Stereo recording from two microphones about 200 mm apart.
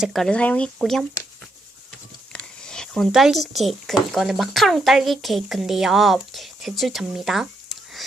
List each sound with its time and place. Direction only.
0.0 s speech: centre (ahead or behind)
2.3 s speech: 5° left (ahead or behind)